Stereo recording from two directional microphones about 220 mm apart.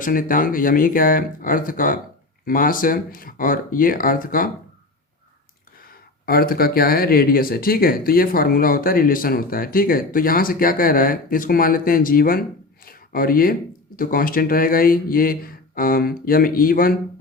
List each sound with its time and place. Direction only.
0.0 s speech: 40° left (ahead or behind)
6.2 s speech: 40° left (ahead or behind)